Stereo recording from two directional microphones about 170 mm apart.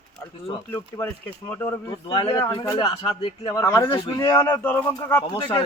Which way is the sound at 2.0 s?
30° left (ahead or behind).